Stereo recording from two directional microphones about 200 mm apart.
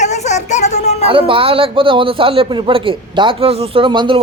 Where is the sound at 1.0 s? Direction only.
30° right (ahead or behind).